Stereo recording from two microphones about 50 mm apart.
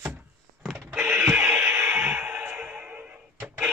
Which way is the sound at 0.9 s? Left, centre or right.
Right.